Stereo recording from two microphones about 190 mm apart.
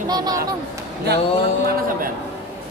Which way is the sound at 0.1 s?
20° right (ahead or behind).